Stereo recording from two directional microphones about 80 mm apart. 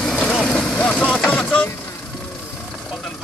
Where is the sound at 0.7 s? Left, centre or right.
Centre.